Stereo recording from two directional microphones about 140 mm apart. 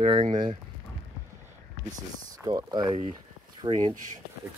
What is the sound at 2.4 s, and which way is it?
Speech, 30° right (ahead or behind).